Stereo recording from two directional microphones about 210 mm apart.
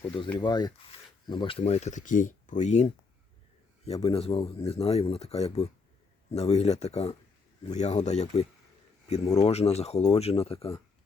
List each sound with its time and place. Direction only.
0.3 s speech: 20° left (ahead or behind)